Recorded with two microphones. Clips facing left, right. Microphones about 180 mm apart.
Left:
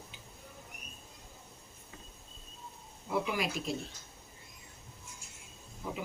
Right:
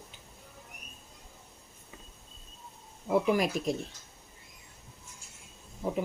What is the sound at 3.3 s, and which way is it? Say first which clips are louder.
Speech: right 6 dB; 45° right (ahead or behind).